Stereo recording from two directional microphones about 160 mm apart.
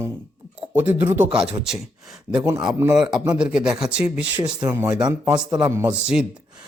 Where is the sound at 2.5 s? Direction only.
20° right (ahead or behind).